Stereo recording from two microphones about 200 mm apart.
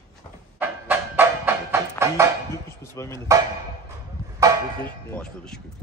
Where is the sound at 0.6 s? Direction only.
10° right (ahead or behind).